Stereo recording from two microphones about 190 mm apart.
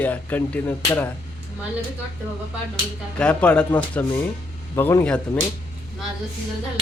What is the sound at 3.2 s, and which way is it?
Speech, 5° left (ahead or behind).